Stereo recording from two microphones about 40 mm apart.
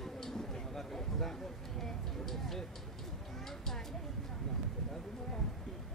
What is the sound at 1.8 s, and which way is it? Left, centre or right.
Speech, centre.